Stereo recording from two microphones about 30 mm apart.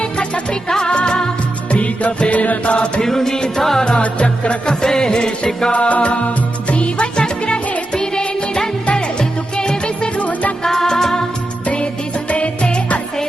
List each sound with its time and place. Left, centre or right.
0.7 s music: left
1.7 s music: left
3.0 s music: centre
4.0 s music: left
4.6 s music: left
5.7 s music: left
9.6 s music: left
10.2 s music: left
10.6 s music: centre
12.3 s music: left